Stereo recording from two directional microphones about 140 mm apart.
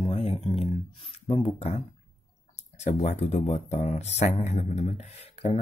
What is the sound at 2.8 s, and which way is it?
Speech, 55° left (ahead or behind).